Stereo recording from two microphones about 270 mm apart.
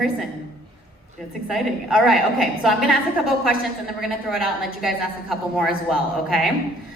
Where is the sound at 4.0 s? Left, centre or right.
Centre.